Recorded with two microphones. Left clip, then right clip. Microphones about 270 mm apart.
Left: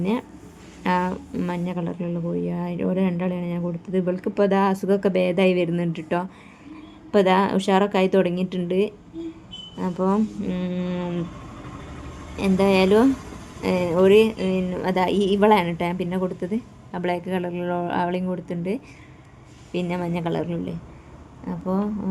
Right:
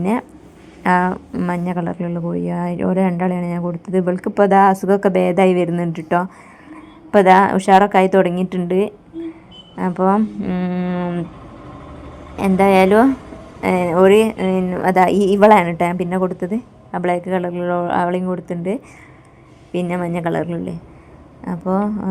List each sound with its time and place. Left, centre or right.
0.0 s speech: centre
12.4 s speech: centre